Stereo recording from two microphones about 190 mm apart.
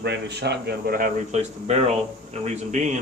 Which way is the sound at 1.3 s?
35° right (ahead or behind).